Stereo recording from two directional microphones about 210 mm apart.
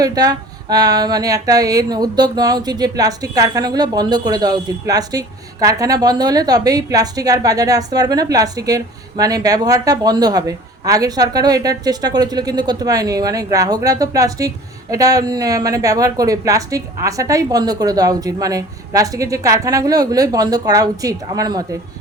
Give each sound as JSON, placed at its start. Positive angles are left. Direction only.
{"t": 0.0, "sound": "speech", "side_deg": -20}